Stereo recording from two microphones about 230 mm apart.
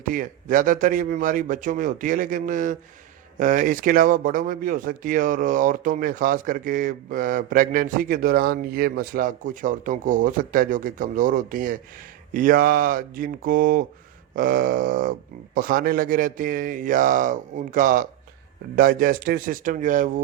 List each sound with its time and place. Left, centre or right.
0.0 s speech: right